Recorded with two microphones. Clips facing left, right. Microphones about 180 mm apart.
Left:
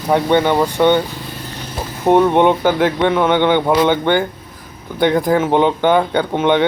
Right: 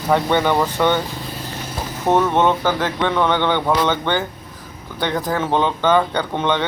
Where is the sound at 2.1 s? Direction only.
15° left (ahead or behind).